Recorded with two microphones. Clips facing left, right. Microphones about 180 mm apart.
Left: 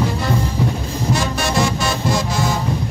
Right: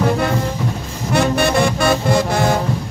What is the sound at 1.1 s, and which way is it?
Music, 60° right (ahead or behind).